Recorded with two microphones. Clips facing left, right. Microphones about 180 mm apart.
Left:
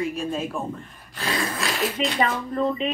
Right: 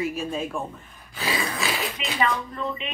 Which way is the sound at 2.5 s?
40° left (ahead or behind).